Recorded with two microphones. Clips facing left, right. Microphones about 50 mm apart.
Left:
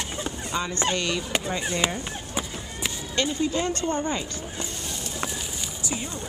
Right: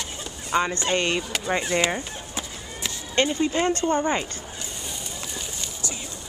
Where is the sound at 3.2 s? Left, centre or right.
Right.